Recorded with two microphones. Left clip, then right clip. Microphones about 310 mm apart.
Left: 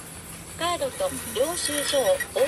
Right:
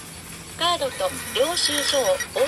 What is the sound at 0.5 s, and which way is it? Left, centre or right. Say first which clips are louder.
Speech: right 4 dB; centre.